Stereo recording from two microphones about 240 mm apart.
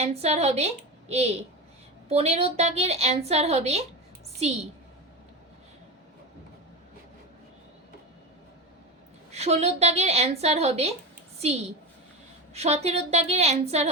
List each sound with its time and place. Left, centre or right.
0.0 s a woman's voice: right
9.3 s a woman's voice: right
12.5 s a woman's voice: right